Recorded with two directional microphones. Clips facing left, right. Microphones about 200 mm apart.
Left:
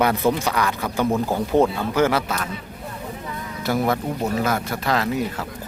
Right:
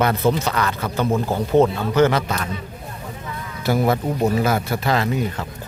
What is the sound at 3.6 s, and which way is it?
Speech, centre (ahead or behind).